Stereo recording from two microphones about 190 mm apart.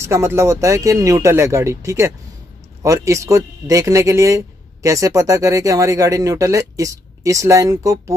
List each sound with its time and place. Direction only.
0.0 s speech: 15° right (ahead or behind)